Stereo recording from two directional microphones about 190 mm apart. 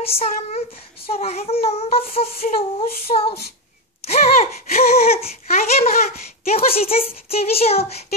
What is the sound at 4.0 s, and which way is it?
Gasp, 35° left (ahead or behind).